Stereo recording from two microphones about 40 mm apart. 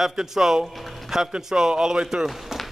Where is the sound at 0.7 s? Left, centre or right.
Centre.